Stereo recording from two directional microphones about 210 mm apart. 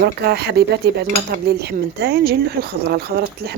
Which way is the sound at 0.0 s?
50° right (ahead or behind).